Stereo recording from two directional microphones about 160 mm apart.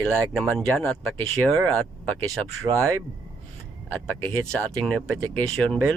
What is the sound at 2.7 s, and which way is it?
Speech, 15° right (ahead or behind).